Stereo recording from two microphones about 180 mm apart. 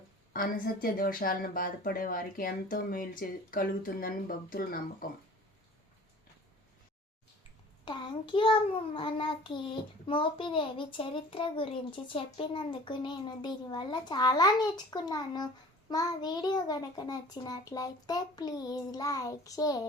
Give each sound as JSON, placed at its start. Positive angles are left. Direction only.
{"t": 0.3, "sound": "speech", "side_deg": 50}
{"t": 7.9, "sound": "a child's voice", "side_deg": 25}